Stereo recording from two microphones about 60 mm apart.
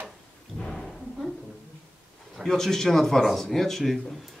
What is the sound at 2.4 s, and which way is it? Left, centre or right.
Speech, centre.